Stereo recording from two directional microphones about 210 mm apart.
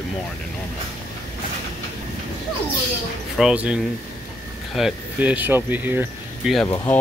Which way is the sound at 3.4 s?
5° right (ahead or behind).